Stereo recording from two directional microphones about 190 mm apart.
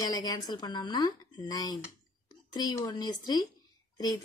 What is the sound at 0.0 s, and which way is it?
A woman's voice, 20° left (ahead or behind).